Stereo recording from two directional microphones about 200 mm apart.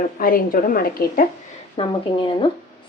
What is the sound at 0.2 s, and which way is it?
A woman's voice, 45° left (ahead or behind).